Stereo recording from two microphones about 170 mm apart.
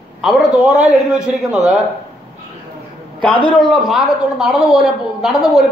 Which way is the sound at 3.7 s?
Centre (ahead or behind).